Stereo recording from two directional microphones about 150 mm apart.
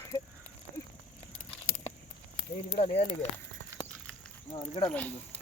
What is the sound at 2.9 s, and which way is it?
Speech, 50° left (ahead or behind).